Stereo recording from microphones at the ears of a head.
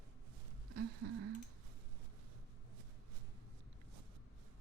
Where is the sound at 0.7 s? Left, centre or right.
Right.